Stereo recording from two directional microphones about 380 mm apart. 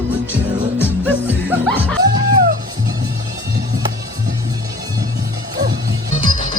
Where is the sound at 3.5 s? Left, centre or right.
Right.